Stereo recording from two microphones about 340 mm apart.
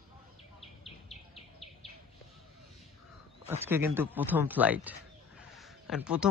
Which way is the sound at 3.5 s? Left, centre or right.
Centre.